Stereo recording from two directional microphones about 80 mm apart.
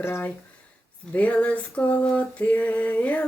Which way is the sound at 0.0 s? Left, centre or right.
Left.